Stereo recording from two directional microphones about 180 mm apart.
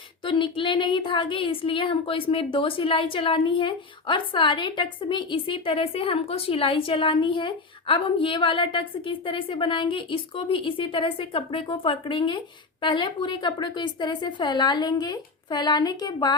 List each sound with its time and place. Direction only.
0.3 s a woman's voice: 25° left (ahead or behind)